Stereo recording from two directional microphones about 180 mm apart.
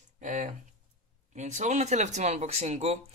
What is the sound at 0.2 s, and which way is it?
Speech, 45° right (ahead or behind).